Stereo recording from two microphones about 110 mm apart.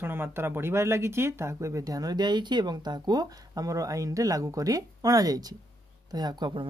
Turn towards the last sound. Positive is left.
turn(degrees=-45)  # may be behind; listen again after turning